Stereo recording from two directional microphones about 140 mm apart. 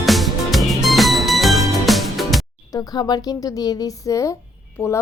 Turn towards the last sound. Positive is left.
turn(degrees=25)  # may be behind; listen again after turning